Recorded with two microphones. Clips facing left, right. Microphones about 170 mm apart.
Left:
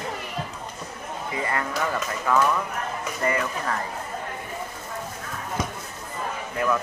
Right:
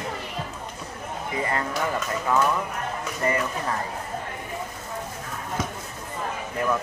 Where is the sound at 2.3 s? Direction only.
20° right (ahead or behind).